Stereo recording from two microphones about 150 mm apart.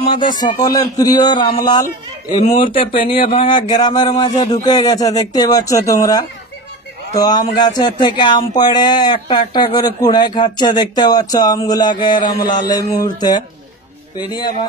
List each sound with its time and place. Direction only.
0.1 s a man's voice: 30° left (ahead or behind)
2.8 s a man's voice: 35° left (ahead or behind)